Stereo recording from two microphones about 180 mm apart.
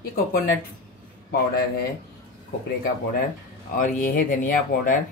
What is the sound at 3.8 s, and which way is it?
Speech, 50° left (ahead or behind).